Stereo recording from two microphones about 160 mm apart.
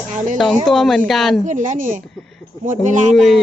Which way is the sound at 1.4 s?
50° right (ahead or behind).